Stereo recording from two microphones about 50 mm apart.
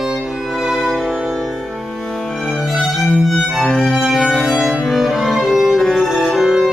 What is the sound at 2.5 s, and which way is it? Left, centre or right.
Violin, centre.